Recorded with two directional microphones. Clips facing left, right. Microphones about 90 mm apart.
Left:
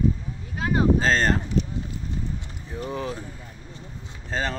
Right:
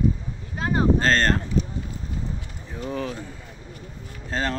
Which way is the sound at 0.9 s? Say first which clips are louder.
Right 1 dB; 5° left (ahead or behind).